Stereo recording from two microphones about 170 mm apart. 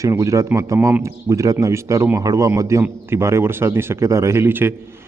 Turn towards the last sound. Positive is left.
turn(degrees=-15)  # may be behind; listen again after turning